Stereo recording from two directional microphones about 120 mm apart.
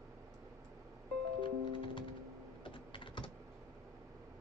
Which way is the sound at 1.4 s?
45° left (ahead or behind).